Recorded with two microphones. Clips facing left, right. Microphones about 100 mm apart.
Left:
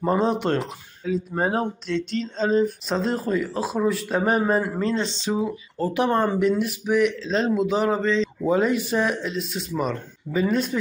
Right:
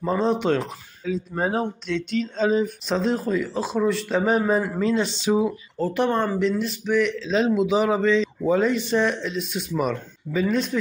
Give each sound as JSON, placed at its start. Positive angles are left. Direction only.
{"t": 0.0, "sound": "speech", "side_deg": 10}
{"t": 4.9, "sound": "speech", "side_deg": -10}
{"t": 5.8, "sound": "speech", "side_deg": 5}
{"t": 7.2, "sound": "speech", "side_deg": 0}
{"t": 8.5, "sound": "speech", "side_deg": 5}